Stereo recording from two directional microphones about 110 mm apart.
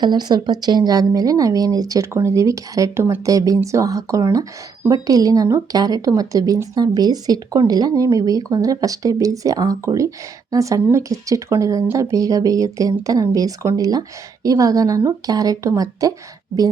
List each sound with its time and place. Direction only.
0.0 s a woman's voice: 40° right (ahead or behind)